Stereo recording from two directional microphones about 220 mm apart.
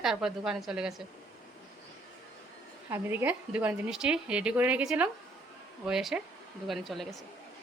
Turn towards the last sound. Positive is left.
turn(degrees=0)  # may be behind; listen again after turning